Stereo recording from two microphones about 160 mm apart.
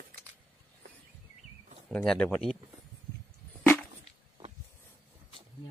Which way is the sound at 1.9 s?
5° left (ahead or behind).